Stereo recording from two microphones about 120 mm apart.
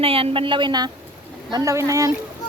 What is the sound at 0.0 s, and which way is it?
A woman's voice, 50° right (ahead or behind).